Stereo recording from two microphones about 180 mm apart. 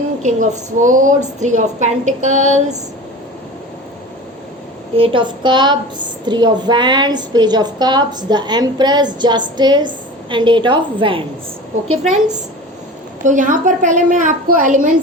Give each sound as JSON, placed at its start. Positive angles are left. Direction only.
{"t": 0.2, "sound": "a woman's voice", "side_deg": -45}
{"t": 4.9, "sound": "a woman's voice", "side_deg": -30}
{"t": 13.2, "sound": "a woman's voice", "side_deg": -45}